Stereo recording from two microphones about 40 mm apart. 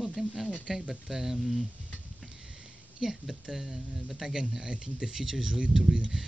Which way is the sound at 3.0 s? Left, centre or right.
Centre.